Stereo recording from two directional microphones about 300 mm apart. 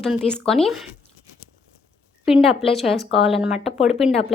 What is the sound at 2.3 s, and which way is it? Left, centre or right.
A woman's voice, centre.